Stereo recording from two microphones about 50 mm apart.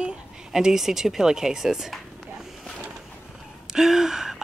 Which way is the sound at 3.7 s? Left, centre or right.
Centre.